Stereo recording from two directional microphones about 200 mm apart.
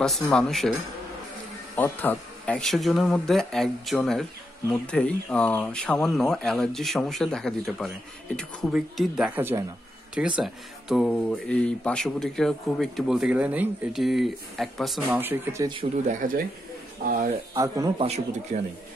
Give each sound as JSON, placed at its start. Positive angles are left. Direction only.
{"t": 0.0, "sound": "speech", "side_deg": 5}
{"t": 1.8, "sound": "speech", "side_deg": 10}
{"t": 15.7, "sound": "speech", "side_deg": -30}
{"t": 17.0, "sound": "speech", "side_deg": -45}
{"t": 17.9, "sound": "a man's voice", "side_deg": -30}